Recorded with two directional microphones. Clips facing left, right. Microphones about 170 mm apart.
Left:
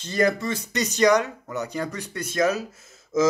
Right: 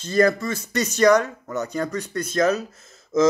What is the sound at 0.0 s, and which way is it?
Speech, 15° left (ahead or behind).